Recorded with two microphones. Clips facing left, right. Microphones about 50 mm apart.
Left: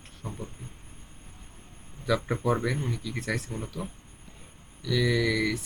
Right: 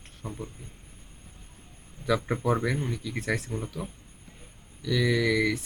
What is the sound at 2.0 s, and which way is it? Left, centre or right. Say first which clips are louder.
Speech: even; centre.